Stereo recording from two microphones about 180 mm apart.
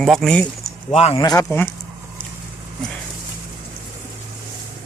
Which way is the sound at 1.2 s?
20° left (ahead or behind).